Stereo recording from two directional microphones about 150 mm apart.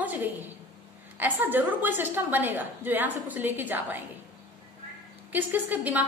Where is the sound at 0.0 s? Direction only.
10° right (ahead or behind).